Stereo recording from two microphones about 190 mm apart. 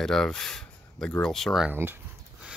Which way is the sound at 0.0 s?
5° left (ahead or behind).